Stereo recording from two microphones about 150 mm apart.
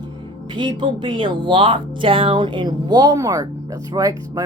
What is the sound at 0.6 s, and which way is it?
Speech, 30° right (ahead or behind).